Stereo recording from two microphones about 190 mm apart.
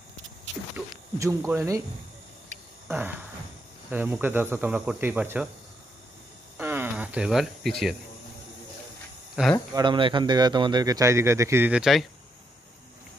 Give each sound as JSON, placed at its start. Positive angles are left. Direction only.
{"t": 0.7, "sound": "speech", "side_deg": -15}
{"t": 2.9, "sound": "a sound", "side_deg": -10}
{"t": 3.9, "sound": "speech", "side_deg": -10}
{"t": 6.6, "sound": "cricket", "side_deg": -10}
{"t": 9.3, "sound": "speech", "side_deg": 0}
{"t": 9.8, "sound": "a man's voice", "side_deg": -25}